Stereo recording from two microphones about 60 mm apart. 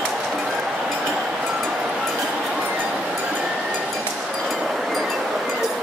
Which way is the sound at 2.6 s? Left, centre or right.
Right.